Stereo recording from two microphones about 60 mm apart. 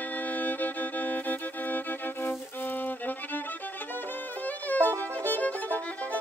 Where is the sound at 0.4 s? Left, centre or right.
Left.